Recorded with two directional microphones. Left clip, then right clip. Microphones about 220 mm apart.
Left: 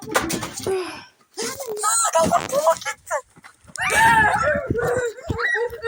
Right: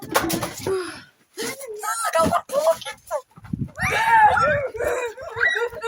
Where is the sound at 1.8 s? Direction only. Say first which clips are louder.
Left 2 dB; 10° right (ahead or behind).